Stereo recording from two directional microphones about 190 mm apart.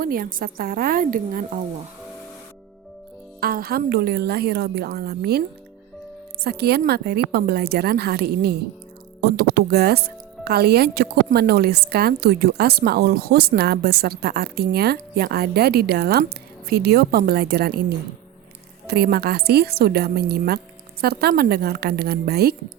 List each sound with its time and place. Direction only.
0.0 s a woman's voice: 50° right (ahead or behind)
3.4 s a woman's voice: 50° right (ahead or behind)
6.4 s a woman's voice: 55° right (ahead or behind)